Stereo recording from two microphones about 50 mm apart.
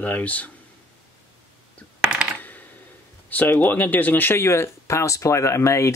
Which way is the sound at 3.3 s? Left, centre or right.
Left.